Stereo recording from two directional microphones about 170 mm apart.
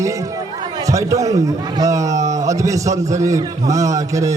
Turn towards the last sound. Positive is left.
turn(degrees=-20)  # may be behind; listen again after turning